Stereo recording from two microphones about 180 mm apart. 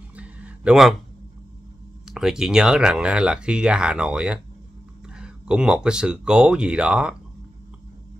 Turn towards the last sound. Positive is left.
turn(degrees=-5)  # may be behind; listen again after turning